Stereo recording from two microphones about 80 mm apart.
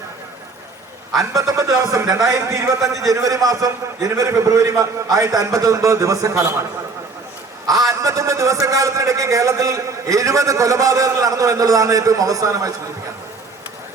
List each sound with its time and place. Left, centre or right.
1.3 s a man's voice: right
7.7 s a man's voice: right